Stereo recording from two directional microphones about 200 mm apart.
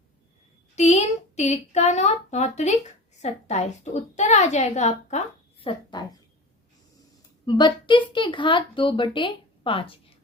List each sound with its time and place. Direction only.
0.8 s a woman's voice: 35° left (ahead or behind)
7.4 s a woman's voice: 20° left (ahead or behind)